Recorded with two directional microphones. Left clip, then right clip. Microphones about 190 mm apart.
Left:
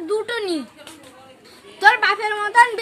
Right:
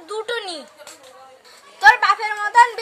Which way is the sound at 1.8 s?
5° right (ahead or behind).